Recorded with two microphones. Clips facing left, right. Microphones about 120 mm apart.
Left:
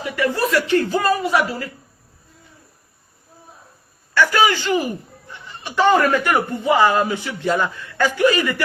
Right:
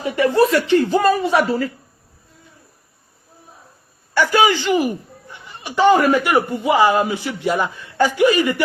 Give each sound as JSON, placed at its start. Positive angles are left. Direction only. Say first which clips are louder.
{"t": 0.0, "sound": "speech", "louder": "right 5 dB", "side_deg": -30}
{"t": 4.1, "sound": "a man's voice", "louder": "right 1 dB", "side_deg": -15}